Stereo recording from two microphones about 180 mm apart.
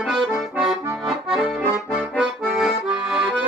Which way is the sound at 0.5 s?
15° right (ahead or behind).